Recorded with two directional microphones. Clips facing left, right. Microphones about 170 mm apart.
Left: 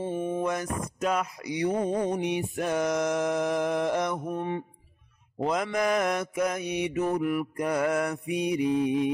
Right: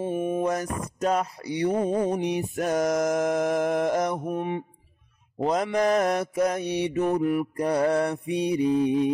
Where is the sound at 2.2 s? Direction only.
35° right (ahead or behind).